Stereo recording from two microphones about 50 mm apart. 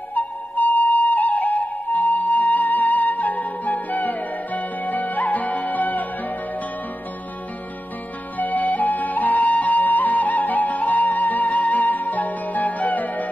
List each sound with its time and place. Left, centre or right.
0.1 s flute: left
8.4 s flute: left